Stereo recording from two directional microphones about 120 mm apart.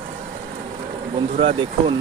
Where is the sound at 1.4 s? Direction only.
45° right (ahead or behind).